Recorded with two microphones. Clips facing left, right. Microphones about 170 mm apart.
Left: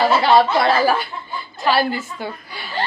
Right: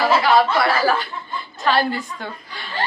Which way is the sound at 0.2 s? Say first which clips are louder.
Left 3 dB; 25° left (ahead or behind).